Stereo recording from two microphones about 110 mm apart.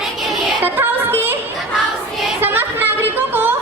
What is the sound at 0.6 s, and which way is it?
Music, 20° right (ahead or behind).